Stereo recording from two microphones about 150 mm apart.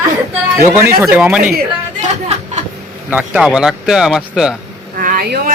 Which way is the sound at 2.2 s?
50° right (ahead or behind).